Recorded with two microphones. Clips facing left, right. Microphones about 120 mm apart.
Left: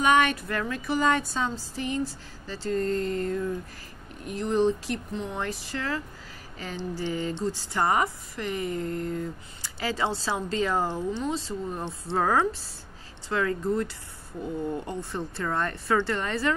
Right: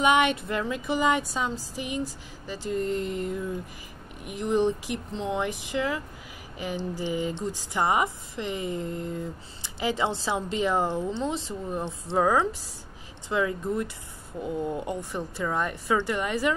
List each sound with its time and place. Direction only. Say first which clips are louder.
0.0 s speech: even; 20° right (ahead or behind)
11.8 s speech: right 4 dB; 10° right (ahead or behind)
14.9 s speech: right 1 dB; 15° right (ahead or behind)